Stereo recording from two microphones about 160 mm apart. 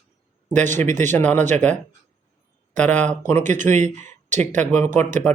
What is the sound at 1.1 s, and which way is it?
Speech, 10° left (ahead or behind).